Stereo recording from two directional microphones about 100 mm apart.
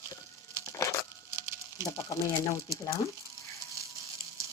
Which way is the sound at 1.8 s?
30° left (ahead or behind).